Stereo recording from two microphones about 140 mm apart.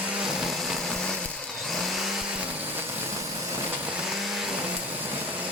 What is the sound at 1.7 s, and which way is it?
Vehicle, centre (ahead or behind).